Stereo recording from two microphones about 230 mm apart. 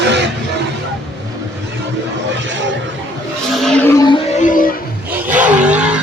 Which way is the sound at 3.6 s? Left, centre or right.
Centre.